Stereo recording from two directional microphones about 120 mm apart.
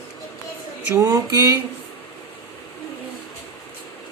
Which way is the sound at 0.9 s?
25° right (ahead or behind).